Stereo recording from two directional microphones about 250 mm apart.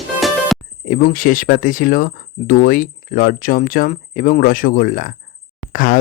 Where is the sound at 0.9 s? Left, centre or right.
Left.